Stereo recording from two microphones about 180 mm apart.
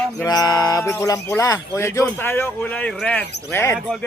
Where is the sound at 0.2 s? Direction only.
20° left (ahead or behind).